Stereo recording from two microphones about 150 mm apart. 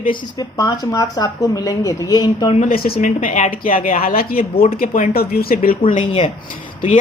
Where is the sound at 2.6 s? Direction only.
75° left (ahead or behind).